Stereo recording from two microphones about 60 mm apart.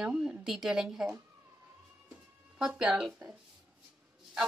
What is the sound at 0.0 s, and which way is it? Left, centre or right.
Speech, centre.